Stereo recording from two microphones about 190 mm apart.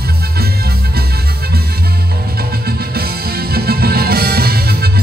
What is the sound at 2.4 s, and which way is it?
Music, 55° right (ahead or behind).